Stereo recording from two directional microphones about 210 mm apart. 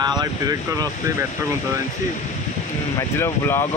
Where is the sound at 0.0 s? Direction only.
20° right (ahead or behind).